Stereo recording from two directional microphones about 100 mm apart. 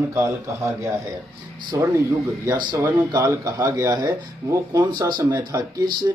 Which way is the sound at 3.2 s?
30° right (ahead or behind).